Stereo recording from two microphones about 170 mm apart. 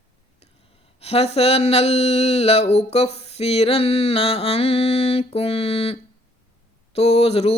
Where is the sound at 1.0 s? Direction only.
35° left (ahead or behind).